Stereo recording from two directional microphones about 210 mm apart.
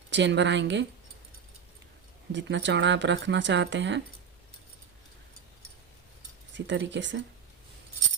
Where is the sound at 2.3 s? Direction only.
60° right (ahead or behind).